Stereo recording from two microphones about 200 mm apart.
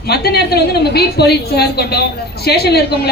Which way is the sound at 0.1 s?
55° left (ahead or behind).